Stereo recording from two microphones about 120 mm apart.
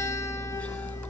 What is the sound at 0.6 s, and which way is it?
Music, 10° left (ahead or behind).